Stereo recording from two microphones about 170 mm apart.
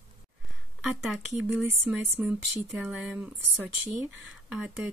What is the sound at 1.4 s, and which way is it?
Speech, 10° right (ahead or behind).